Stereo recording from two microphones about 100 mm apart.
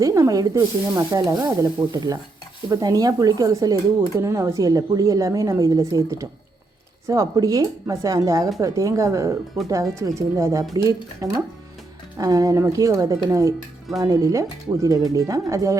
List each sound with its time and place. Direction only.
0.0 s speech: 35° right (ahead or behind)